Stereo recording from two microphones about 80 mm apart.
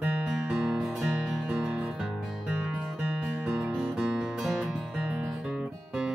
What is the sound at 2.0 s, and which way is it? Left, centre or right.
Music, centre.